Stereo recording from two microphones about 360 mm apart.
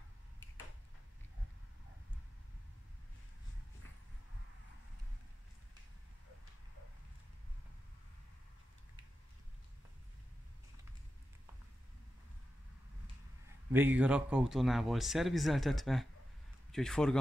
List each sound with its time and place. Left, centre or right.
13.7 s speech: centre